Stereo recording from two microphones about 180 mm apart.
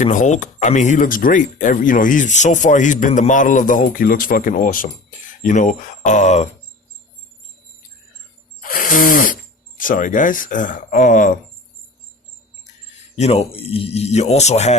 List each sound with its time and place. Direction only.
0.0 s speech: 45° left (ahead or behind)
8.6 s speech: 50° left (ahead or behind)
13.1 s a man's voice: 35° left (ahead or behind)